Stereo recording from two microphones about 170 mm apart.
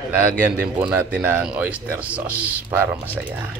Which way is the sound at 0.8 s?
5° right (ahead or behind).